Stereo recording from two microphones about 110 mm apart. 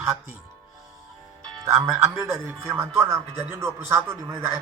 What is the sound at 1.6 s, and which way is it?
Speech, 25° right (ahead or behind).